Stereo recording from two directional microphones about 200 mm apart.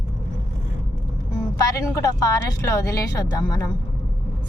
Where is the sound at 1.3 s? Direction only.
15° left (ahead or behind).